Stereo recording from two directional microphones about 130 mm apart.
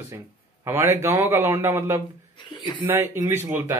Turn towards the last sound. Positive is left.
turn(degrees=-20)  # may be behind; listen again after turning